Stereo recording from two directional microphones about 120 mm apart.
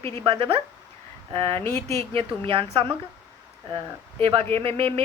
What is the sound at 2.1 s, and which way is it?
Speech, 50° right (ahead or behind).